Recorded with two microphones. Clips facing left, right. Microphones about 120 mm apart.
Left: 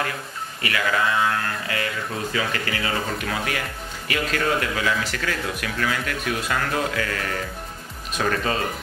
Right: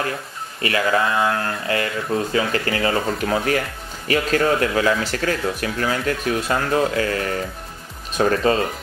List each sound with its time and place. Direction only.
0.6 s speech: 35° right (ahead or behind)